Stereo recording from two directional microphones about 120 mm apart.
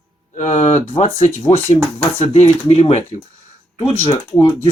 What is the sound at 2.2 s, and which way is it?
Speech, 60° left (ahead or behind).